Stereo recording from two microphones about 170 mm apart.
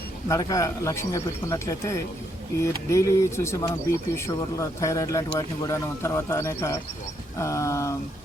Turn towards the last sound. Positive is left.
turn(degrees=20)  # may be behind; listen again after turning